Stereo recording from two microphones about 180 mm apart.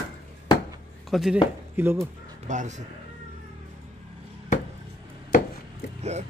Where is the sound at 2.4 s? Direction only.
45° right (ahead or behind).